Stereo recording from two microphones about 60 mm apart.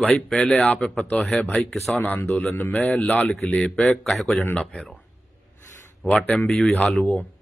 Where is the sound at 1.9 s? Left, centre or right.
Left.